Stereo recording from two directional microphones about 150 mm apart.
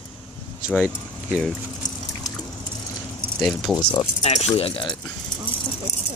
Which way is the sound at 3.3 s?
5° right (ahead or behind).